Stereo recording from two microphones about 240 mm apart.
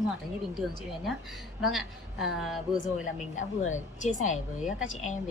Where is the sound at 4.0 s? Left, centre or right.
Left.